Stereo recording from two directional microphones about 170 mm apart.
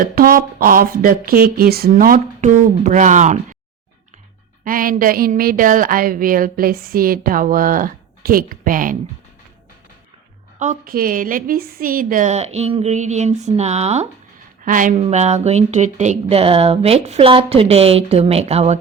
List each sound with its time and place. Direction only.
0.0 s a woman's voice: 55° right (ahead or behind)
4.6 s a woman's voice: 55° right (ahead or behind)
10.6 s a woman's voice: 50° right (ahead or behind)
14.6 s a woman's voice: 50° right (ahead or behind)
14.9 s speech: 40° right (ahead or behind)